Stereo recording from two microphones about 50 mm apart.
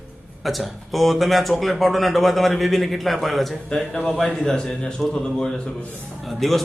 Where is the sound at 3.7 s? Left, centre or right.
Centre.